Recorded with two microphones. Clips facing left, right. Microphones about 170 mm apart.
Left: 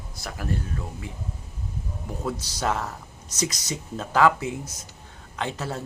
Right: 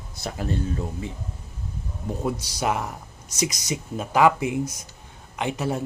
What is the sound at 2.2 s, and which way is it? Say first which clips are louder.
Speech: right 1 dB; 15° right (ahead or behind).